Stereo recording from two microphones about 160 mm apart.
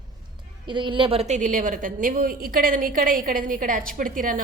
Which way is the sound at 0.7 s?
30° right (ahead or behind).